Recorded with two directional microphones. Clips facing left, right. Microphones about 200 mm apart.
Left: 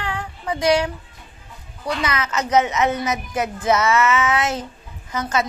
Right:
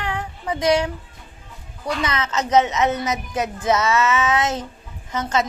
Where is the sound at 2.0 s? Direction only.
25° right (ahead or behind).